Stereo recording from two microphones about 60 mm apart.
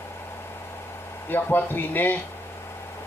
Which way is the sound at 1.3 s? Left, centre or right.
Left.